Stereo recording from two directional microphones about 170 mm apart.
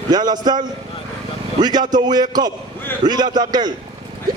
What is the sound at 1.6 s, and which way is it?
A man's voice, 25° right (ahead or behind).